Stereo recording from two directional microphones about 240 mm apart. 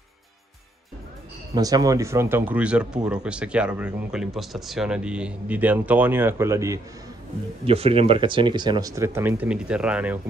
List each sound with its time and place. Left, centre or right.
1.5 s speech: centre
7.6 s speech: right; by 10.1 s centre